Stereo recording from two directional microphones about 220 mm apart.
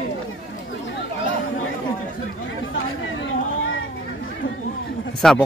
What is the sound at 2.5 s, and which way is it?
Speech, 60° left (ahead or behind).